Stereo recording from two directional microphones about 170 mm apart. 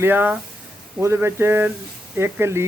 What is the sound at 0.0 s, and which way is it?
Speech, 10° right (ahead or behind).